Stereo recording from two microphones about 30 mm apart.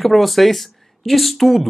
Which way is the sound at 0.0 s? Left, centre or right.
Centre.